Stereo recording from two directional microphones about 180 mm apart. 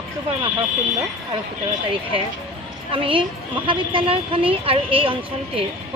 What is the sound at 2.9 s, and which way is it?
Speech, 30° right (ahead or behind).